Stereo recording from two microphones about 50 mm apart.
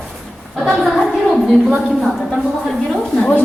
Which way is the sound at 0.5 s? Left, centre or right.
Centre.